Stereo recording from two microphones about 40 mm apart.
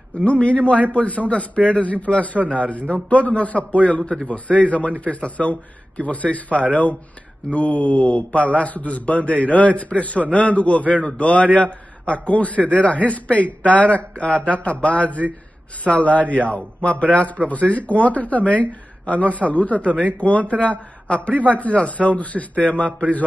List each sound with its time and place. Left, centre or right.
0.1 s a man's voice: left